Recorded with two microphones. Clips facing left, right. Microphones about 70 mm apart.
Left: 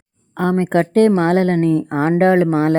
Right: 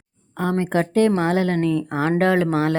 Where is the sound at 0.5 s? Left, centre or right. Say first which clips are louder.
Left 5 dB; left.